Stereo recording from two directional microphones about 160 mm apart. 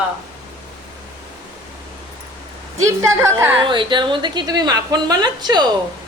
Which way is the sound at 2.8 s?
20° right (ahead or behind).